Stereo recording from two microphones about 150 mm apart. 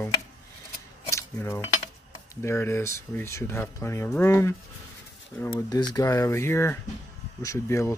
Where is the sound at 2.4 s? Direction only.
15° left (ahead or behind).